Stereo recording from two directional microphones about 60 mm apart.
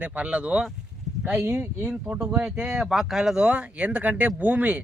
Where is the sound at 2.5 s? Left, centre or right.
Centre.